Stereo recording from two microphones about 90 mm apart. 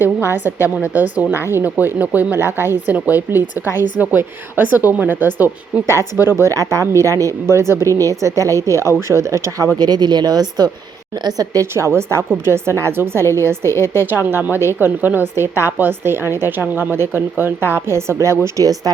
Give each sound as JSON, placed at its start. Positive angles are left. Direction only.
{"t": 0.0, "sound": "a woman's voice", "side_deg": -25}
{"t": 6.2, "sound": "speech", "side_deg": -30}
{"t": 9.7, "sound": "speech", "side_deg": -50}
{"t": 11.3, "sound": "a woman's voice", "side_deg": -35}